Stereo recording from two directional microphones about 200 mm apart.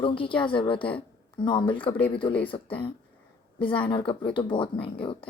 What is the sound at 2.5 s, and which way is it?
Speech, 25° left (ahead or behind).